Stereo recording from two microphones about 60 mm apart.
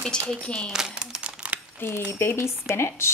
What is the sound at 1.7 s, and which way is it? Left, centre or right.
Speech, left.